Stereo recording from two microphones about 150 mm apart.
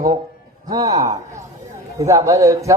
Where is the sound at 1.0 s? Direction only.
25° right (ahead or behind).